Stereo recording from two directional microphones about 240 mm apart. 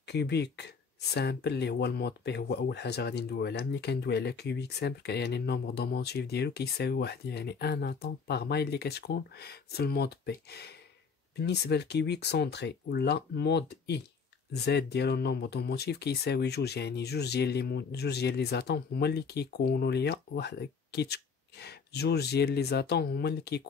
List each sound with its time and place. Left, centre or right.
0.0 s speech: left